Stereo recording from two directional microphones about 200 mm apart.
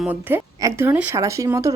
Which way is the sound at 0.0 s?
10° right (ahead or behind).